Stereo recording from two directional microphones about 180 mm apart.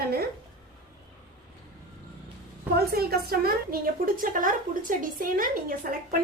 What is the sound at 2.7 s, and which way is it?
A woman's voice, 60° right (ahead or behind).